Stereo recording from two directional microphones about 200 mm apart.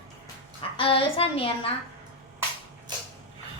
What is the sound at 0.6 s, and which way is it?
A child's voice, 25° left (ahead or behind).